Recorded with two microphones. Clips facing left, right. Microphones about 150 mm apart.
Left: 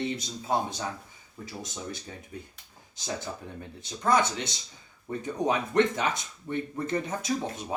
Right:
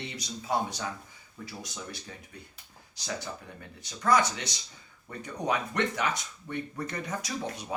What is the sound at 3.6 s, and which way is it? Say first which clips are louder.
Speech: left 3 dB; 25° left (ahead or behind).